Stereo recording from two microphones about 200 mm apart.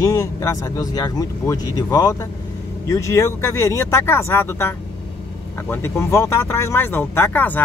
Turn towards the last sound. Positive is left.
turn(degrees=10)  # may be behind; listen again after turning